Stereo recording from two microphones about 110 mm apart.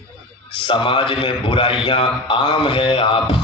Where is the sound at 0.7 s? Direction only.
50° left (ahead or behind).